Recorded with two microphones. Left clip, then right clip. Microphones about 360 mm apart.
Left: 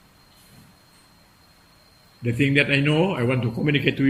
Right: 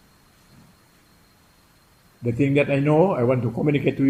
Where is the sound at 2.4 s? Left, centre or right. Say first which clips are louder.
Left 1 dB; centre.